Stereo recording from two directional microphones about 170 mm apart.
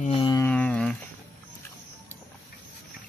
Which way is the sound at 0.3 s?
10° left (ahead or behind).